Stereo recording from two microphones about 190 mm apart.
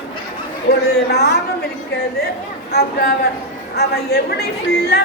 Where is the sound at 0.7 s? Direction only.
60° left (ahead or behind).